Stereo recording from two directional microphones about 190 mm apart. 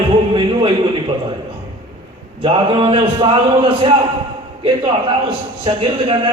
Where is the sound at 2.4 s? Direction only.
30° right (ahead or behind).